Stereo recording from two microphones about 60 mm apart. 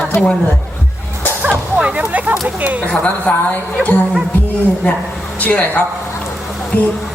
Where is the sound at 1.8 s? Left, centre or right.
Right.